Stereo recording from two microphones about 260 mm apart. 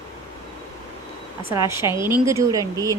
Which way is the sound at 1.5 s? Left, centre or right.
Centre.